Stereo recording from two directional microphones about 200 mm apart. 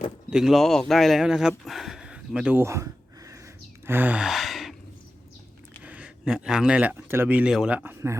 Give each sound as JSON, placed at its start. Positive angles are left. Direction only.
{"t": 0.3, "sound": "speech", "side_deg": 0}
{"t": 5.8, "sound": "speech", "side_deg": -5}